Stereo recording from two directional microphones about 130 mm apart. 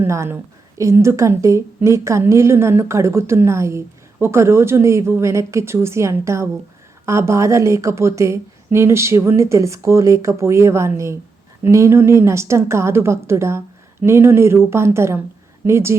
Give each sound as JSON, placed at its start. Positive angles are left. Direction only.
{"t": 0.0, "sound": "a woman's voice", "side_deg": -20}